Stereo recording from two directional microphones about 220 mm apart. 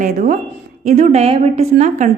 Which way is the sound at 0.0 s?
35° right (ahead or behind).